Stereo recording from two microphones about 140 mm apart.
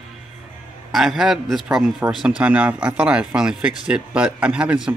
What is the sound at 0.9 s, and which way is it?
Speech, centre (ahead or behind).